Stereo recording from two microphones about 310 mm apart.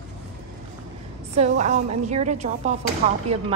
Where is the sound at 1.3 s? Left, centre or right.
Right.